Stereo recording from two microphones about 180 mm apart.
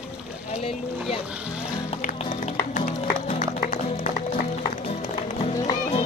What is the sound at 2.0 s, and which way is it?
Music, 45° left (ahead or behind).